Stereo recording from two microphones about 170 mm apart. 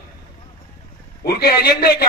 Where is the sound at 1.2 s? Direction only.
65° left (ahead or behind).